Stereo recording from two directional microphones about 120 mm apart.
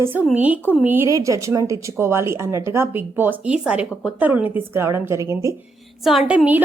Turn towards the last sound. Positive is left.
turn(degrees=-10)  # may be behind; listen again after turning